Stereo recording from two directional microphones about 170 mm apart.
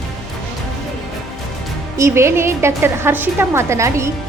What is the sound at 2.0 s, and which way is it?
A woman's voice, 15° right (ahead or behind).